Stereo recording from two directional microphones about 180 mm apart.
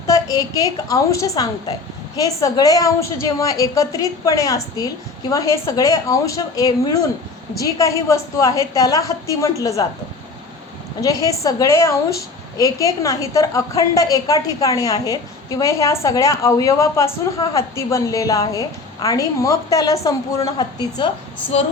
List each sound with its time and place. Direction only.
0.1 s a woman's voice: 20° left (ahead or behind)
11.0 s a woman's voice: 20° left (ahead or behind)